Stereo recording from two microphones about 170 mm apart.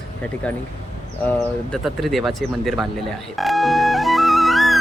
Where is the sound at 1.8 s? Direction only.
Centre (ahead or behind).